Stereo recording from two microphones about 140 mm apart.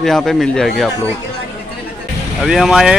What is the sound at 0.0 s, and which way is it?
Speech, 5° left (ahead or behind).